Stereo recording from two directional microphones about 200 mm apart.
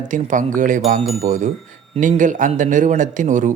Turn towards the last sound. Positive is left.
turn(degrees=-40)  # may be behind; listen again after turning